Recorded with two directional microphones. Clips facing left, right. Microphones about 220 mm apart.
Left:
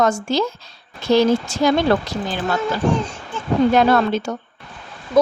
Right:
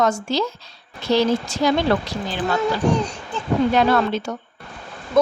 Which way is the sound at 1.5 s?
50° left (ahead or behind).